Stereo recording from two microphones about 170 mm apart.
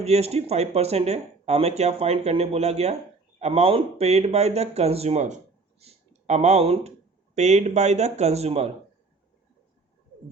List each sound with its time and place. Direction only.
0.0 s speech: 40° right (ahead or behind)